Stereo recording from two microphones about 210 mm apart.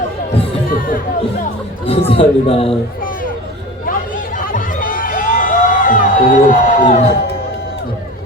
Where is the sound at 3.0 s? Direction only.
40° left (ahead or behind).